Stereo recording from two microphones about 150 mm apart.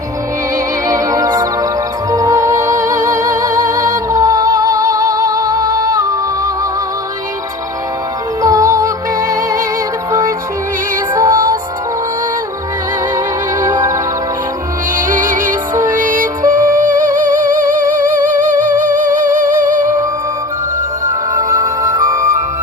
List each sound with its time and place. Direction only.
0.9 s music: 20° right (ahead or behind)
8.4 s music: 20° right (ahead or behind)
13.7 s music: 20° right (ahead or behind)
14.9 s music: 65° right (ahead or behind)
21.3 s music: 30° right (ahead or behind)